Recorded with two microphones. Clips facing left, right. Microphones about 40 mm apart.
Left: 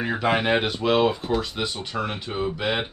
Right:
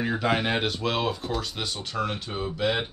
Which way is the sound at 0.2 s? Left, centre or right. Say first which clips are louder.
Left 6 dB; centre.